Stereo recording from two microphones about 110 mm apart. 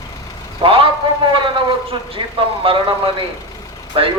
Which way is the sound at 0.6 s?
55° right (ahead or behind).